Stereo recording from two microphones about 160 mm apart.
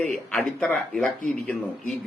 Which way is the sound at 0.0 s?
10° left (ahead or behind).